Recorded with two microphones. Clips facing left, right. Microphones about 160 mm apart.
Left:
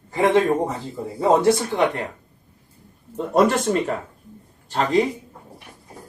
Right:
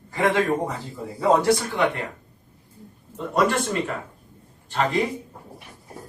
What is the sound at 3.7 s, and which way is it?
Speech, 35° left (ahead or behind).